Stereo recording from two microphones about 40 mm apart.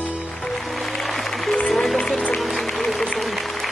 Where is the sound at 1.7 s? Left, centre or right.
Centre.